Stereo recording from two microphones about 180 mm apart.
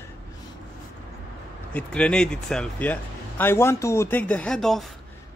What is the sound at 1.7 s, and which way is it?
Speech, 5° left (ahead or behind).